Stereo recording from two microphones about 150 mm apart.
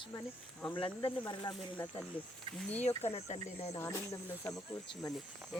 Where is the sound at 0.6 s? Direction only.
35° left (ahead or behind).